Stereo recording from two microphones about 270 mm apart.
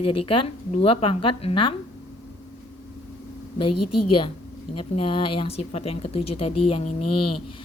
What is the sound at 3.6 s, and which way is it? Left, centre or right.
Speech, left.